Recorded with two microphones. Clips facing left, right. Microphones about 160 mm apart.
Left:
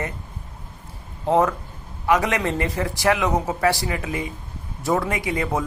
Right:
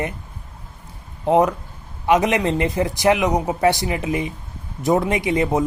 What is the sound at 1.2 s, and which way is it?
A man's voice, 15° right (ahead or behind).